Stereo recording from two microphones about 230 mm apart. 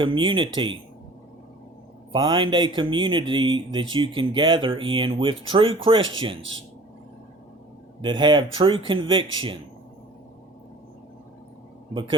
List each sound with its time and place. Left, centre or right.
0.0 s speech: right
2.1 s speech: right
6.0 s speech: right
8.0 s speech: centre